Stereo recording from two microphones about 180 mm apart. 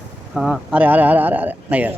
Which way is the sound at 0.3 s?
5° right (ahead or behind).